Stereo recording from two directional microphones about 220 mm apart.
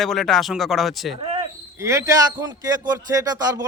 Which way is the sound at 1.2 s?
25° right (ahead or behind).